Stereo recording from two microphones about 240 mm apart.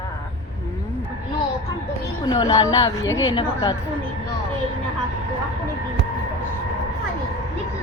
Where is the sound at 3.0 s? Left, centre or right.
Left.